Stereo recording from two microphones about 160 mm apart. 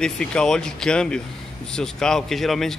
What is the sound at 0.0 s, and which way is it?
Speech, 5° left (ahead or behind).